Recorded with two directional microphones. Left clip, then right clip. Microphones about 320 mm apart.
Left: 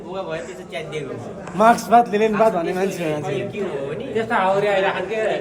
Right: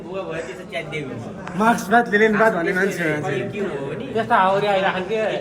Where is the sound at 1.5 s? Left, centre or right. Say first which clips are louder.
Left 4 dB; left.